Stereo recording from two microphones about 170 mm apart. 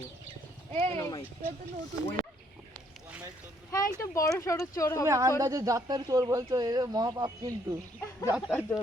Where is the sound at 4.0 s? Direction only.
15° left (ahead or behind).